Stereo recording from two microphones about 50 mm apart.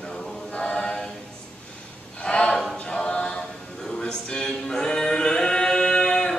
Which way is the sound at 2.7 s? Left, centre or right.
Left.